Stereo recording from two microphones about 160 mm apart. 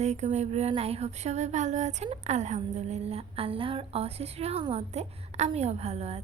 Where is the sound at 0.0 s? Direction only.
45° right (ahead or behind).